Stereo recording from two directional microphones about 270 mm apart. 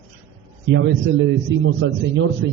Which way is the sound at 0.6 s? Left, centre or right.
Right.